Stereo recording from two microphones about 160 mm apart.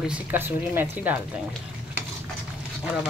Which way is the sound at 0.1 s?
10° right (ahead or behind).